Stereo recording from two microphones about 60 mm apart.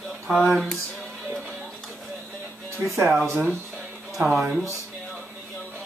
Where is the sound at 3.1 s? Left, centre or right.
Centre.